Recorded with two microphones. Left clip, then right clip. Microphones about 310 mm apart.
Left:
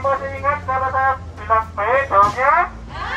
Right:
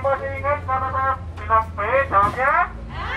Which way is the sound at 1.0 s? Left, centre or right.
Left.